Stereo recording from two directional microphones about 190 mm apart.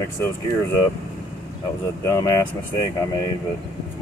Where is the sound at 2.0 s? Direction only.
15° left (ahead or behind).